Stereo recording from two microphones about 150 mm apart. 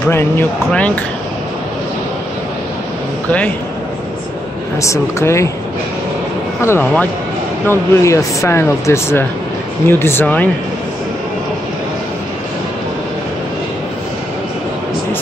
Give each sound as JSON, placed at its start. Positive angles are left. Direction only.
{"t": 0.1, "sound": "speech", "side_deg": 15}
{"t": 4.8, "sound": "speech", "side_deg": 20}
{"t": 6.6, "sound": "speech", "side_deg": 15}